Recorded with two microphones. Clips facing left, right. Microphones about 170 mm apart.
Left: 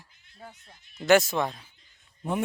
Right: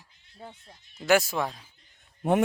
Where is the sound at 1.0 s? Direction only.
10° right (ahead or behind).